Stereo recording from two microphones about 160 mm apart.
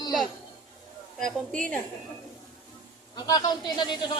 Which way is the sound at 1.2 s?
55° right (ahead or behind).